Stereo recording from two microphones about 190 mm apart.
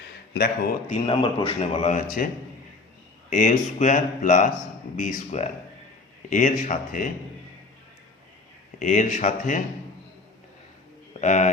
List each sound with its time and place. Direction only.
0.3 s speech: 55° left (ahead or behind)
1.0 s a man's voice: 25° left (ahead or behind)
1.8 s speech: 40° left (ahead or behind)
3.2 s speech: 40° left (ahead or behind)
8.8 s speech: 40° left (ahead or behind)
11.2 s speech: 40° left (ahead or behind)